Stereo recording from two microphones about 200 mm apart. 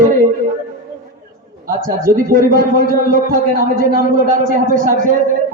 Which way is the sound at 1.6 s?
45° right (ahead or behind).